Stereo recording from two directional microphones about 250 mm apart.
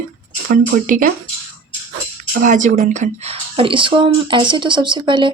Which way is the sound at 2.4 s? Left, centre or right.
Right.